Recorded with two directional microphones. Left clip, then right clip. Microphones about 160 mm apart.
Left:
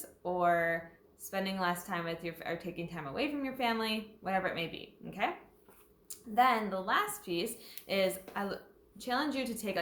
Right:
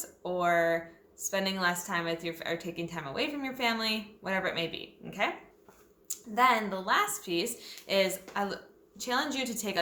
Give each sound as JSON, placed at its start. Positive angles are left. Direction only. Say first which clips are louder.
{"t": 0.0, "sound": "a woman's voice", "louder": "right 1 dB", "side_deg": -15}